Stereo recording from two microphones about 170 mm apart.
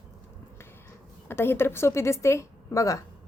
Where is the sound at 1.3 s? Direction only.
15° left (ahead or behind).